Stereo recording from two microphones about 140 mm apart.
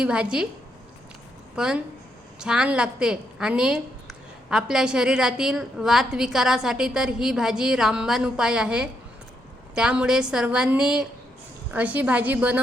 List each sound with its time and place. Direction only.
0.0 s a woman's voice: 5° right (ahead or behind)
1.5 s a woman's voice: 5° right (ahead or behind)